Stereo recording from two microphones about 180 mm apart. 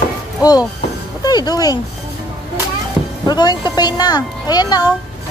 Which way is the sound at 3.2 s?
20° left (ahead or behind).